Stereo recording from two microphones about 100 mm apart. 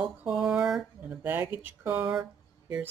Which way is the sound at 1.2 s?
20° right (ahead or behind).